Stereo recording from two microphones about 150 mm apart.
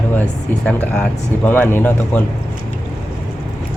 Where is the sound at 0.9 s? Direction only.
10° left (ahead or behind).